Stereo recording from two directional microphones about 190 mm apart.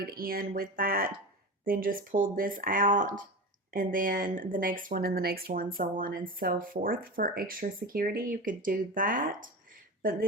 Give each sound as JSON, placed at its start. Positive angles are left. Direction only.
{"t": 0.0, "sound": "speech", "side_deg": -50}